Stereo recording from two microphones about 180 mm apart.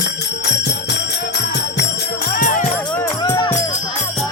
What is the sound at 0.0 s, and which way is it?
Music, 70° left (ahead or behind).